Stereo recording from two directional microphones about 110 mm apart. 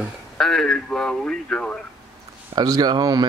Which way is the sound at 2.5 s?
40° right (ahead or behind).